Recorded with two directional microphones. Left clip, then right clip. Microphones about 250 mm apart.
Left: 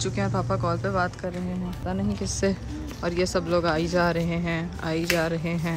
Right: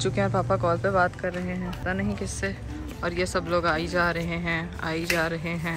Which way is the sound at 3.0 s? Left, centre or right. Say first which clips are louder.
Left 1 dB; centre.